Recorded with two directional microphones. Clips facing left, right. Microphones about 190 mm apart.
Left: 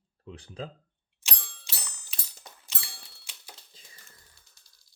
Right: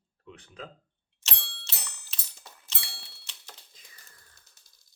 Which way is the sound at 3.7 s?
25° left (ahead or behind).